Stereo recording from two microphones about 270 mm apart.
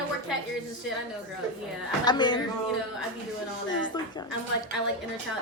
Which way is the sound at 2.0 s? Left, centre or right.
Centre.